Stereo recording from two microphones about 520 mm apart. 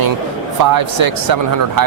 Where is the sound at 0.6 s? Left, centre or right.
Right.